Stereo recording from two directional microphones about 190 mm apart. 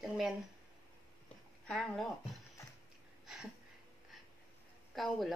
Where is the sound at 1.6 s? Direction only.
Centre (ahead or behind).